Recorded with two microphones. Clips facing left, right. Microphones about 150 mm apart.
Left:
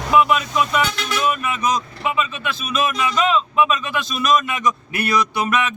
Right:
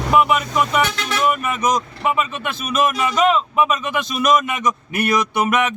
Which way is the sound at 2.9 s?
5° right (ahead or behind).